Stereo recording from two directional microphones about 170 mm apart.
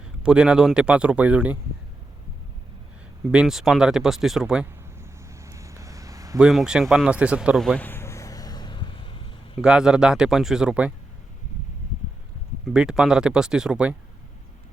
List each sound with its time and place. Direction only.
0.2 s speech: 5° right (ahead or behind)
3.3 s speech: centre (ahead or behind)
5.3 s a sound: 15° right (ahead or behind)
6.4 s a sound: centre (ahead or behind); by 9.3 s 30° left (ahead or behind)
9.6 s speech: 5° right (ahead or behind)
12.6 s speech: 5° right (ahead or behind)